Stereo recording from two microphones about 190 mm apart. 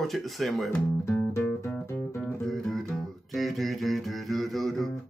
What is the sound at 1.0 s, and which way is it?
Music, 15° left (ahead or behind).